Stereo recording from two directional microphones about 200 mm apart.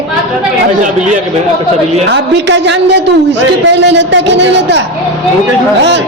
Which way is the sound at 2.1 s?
60° right (ahead or behind).